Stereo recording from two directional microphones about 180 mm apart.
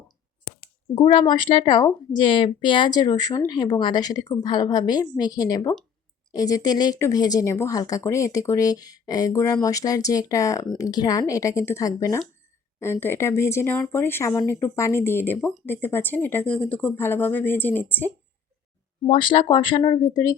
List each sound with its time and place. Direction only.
0.9 s a woman's voice: 25° left (ahead or behind); by 18.1 s 10° left (ahead or behind)
19.0 s a woman's voice: 30° left (ahead or behind)